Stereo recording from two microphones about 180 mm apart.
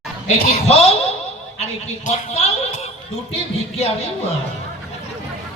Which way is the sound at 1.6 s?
35° left (ahead or behind).